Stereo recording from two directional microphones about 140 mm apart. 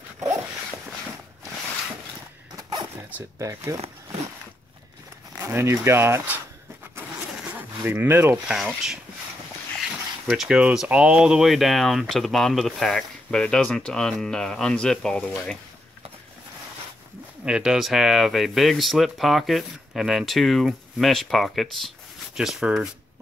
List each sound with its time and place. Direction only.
3.3 s speech: 20° right (ahead or behind)
3.7 s a sound: 45° right (ahead or behind)
5.4 s speech: 15° right (ahead or behind)
7.0 s vehicle: 15° right (ahead or behind)
8.5 s speech: 5° right (ahead or behind)
10.2 s speech: centre (ahead or behind)
17.5 s speech: 5° right (ahead or behind)